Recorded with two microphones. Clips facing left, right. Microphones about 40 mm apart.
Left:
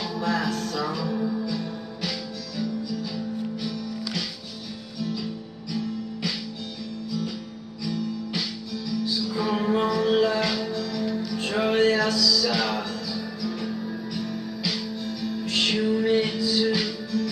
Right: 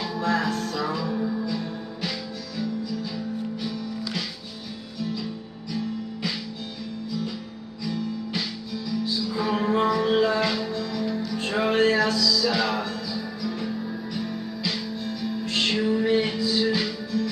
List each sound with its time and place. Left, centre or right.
0.0 s music: centre
5.7 s music: centre
7.8 s music: centre